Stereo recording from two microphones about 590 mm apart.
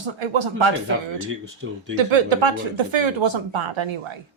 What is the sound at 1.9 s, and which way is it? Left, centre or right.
Speech, right.